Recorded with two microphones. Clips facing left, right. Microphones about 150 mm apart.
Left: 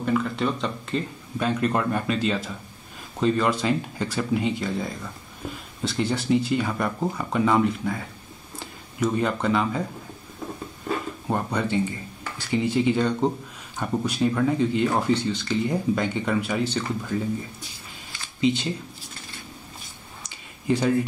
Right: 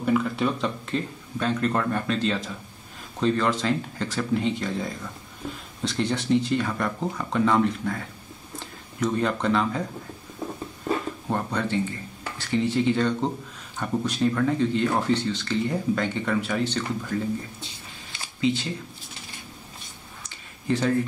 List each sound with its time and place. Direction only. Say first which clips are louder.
0.0 s speech: right 1 dB; 5° right (ahead or behind)
1.4 s speech: left 1 dB; 10° left (ahead or behind)
11.2 s speech: left 2 dB; 10° left (ahead or behind)
18.4 s speech: left 2 dB; 20° left (ahead or behind)
20.2 s a sound: left 2 dB; 15° left (ahead or behind)